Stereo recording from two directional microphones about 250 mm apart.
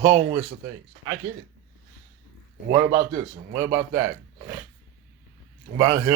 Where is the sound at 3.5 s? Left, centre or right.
Centre.